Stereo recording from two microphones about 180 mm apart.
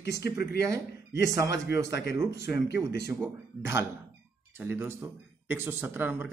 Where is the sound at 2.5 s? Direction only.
65° left (ahead or behind).